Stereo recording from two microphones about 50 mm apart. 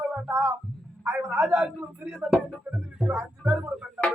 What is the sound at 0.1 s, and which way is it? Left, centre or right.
Speech, right.